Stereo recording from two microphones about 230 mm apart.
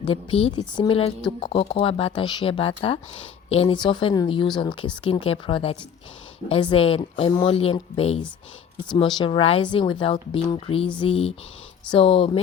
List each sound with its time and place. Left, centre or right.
0.0 s speech: left